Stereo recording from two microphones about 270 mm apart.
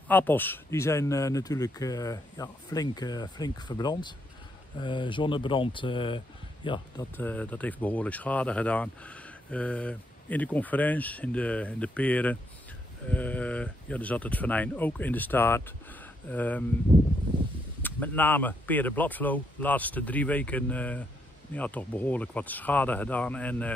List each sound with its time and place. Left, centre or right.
0.1 s speech: centre
7.2 s speech: centre
17.8 s speech: centre